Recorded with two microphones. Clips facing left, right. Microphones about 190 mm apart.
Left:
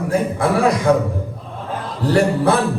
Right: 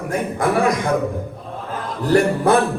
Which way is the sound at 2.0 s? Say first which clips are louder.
Even; 30° left (ahead or behind).